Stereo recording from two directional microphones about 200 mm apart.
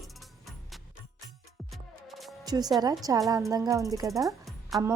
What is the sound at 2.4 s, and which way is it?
A woman's voice, 20° right (ahead or behind).